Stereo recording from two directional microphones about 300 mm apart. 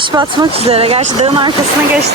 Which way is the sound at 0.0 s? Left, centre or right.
Centre.